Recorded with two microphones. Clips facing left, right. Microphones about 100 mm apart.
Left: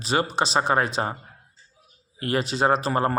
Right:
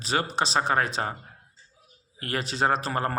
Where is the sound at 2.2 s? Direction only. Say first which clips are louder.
Left 4 dB; 10° left (ahead or behind).